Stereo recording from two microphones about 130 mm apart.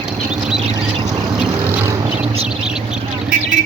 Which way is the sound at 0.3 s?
5° right (ahead or behind).